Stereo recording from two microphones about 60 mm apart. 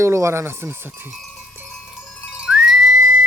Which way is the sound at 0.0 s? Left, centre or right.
Right.